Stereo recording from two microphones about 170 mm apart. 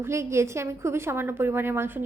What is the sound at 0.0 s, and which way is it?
A woman's voice, 15° right (ahead or behind).